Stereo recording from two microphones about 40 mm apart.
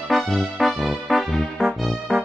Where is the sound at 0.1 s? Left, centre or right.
Centre.